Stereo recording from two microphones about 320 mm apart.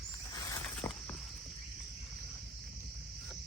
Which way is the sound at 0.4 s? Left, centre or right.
Centre.